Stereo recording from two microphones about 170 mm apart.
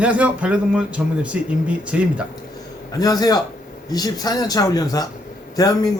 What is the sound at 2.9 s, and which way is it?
A man's voice, 20° left (ahead or behind).